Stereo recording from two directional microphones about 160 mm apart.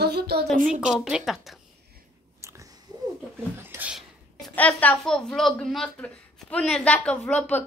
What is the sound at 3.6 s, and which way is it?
Humming, 10° right (ahead or behind).